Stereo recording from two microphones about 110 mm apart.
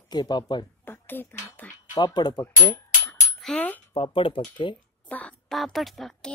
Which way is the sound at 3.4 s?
10° left (ahead or behind).